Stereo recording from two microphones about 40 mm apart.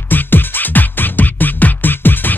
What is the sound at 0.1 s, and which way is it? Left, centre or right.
Music, left.